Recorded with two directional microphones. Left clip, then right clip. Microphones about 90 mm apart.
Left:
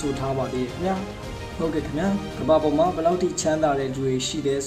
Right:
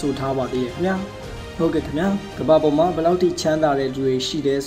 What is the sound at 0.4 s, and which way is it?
Speech, 40° right (ahead or behind).